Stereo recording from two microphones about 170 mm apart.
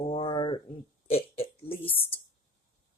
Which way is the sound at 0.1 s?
30° left (ahead or behind).